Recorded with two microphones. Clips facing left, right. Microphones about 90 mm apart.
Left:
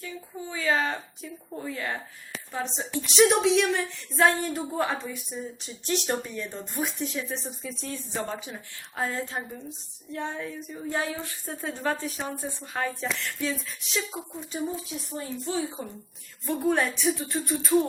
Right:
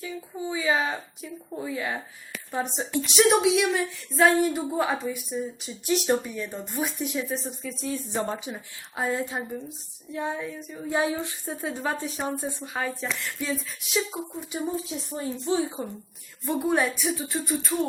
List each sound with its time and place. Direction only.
0.0 s speech: 10° right (ahead or behind)
3.2 s speech: 5° right (ahead or behind)
8.1 s a woman's voice: 20° right (ahead or behind); by 10.8 s centre (ahead or behind)
10.8 s speech: 15° right (ahead or behind)
12.2 s speech: 5° right (ahead or behind)
14.3 s a woman's voice: 15° right (ahead or behind)
16.5 s speech: 5° right (ahead or behind)